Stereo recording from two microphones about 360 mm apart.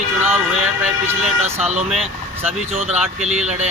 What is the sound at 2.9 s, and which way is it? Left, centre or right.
Speech, centre.